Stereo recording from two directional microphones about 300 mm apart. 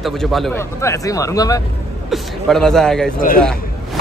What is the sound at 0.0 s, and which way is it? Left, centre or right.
A man's voice, centre.